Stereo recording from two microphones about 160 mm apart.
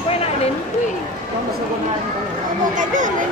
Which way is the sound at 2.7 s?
55° right (ahead or behind).